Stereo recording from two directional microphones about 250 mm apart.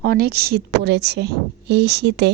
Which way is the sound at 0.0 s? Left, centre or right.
Right.